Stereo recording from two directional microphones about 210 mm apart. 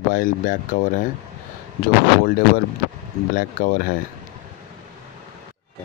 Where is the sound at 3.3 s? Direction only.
40° left (ahead or behind).